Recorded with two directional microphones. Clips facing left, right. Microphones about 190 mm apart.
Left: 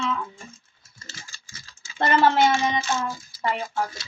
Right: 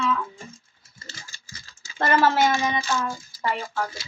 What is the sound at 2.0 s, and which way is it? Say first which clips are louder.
Speech: left 1 dB; 25° left (ahead or behind).